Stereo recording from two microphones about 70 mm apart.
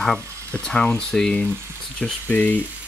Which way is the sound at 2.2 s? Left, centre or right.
Left.